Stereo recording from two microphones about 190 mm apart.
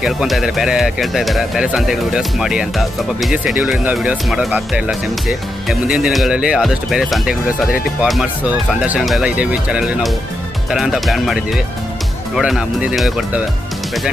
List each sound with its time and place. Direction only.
0.0 s speech: centre (ahead or behind)